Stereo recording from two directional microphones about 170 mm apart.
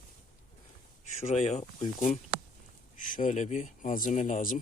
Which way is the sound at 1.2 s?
40° left (ahead or behind).